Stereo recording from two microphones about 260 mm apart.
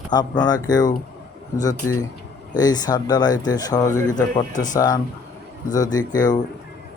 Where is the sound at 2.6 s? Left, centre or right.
Centre.